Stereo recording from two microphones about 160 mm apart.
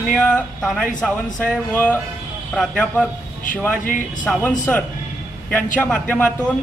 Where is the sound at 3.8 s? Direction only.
55° left (ahead or behind).